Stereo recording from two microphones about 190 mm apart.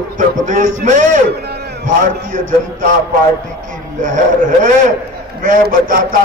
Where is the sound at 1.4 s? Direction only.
60° right (ahead or behind).